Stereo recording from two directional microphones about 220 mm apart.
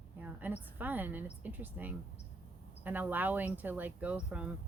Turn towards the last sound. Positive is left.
turn(degrees=-5)  # may be behind; listen again after turning